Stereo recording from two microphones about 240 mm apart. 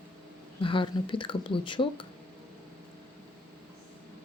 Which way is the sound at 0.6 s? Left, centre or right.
Left.